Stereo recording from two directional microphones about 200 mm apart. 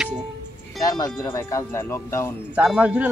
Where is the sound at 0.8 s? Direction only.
20° left (ahead or behind).